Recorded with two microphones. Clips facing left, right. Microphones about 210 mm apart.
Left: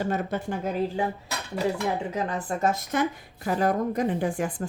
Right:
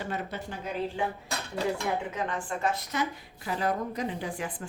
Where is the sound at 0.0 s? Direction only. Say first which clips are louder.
Left 7 dB; 45° left (ahead or behind).